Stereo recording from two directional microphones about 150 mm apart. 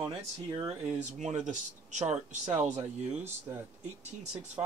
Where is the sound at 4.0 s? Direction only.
50° right (ahead or behind).